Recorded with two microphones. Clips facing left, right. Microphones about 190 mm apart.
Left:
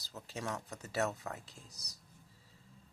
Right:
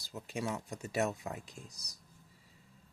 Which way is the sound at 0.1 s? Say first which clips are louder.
Right 3 dB; 15° right (ahead or behind).